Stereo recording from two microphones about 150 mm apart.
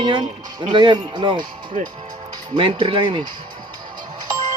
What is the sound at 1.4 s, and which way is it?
Speech, 65° right (ahead or behind).